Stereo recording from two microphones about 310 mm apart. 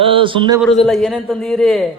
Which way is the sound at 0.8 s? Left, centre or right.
Centre.